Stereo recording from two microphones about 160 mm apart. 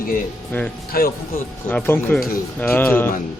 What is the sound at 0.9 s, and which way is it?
Speech, 70° left (ahead or behind).